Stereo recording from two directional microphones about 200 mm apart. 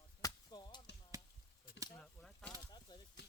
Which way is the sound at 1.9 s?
5° left (ahead or behind).